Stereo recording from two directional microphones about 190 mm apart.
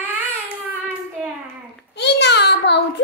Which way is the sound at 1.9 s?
65° left (ahead or behind).